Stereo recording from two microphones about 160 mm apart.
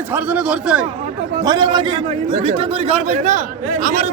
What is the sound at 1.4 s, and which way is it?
A man's voice, 25° right (ahead or behind).